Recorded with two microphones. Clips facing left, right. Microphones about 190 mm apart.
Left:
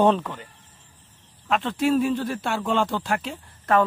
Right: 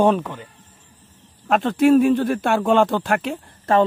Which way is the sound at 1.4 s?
45° right (ahead or behind).